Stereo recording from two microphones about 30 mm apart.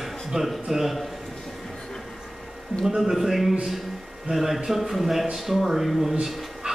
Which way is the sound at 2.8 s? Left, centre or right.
Centre.